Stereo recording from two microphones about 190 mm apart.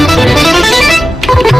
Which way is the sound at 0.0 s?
Centre (ahead or behind).